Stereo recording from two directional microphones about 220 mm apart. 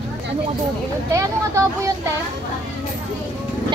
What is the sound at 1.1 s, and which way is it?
Speech, 15° right (ahead or behind).